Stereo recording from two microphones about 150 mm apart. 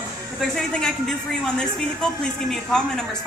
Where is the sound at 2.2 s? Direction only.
5° left (ahead or behind).